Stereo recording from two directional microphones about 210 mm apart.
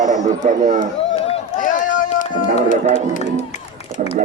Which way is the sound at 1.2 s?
35° left (ahead or behind).